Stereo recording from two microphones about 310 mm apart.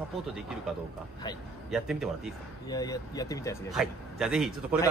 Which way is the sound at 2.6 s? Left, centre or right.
Centre.